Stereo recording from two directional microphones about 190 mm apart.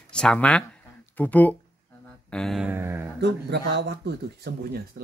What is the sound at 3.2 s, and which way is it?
Speech, 60° right (ahead or behind).